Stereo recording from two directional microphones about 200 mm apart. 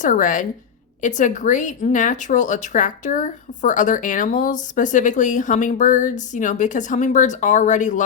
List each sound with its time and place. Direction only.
0.0 s speech: 40° left (ahead or behind)